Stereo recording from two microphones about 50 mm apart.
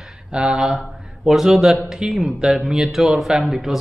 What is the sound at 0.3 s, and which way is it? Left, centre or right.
A man's voice, centre.